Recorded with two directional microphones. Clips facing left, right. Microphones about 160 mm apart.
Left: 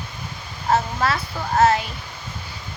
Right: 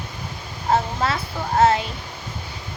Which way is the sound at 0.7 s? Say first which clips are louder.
Even; 20° right (ahead or behind).